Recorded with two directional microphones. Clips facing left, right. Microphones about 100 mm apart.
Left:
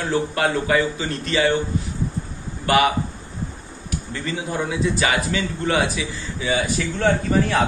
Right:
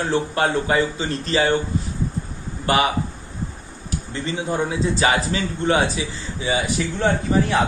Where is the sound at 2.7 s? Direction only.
30° right (ahead or behind).